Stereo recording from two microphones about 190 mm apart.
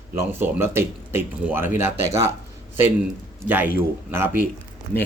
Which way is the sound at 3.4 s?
10° right (ahead or behind).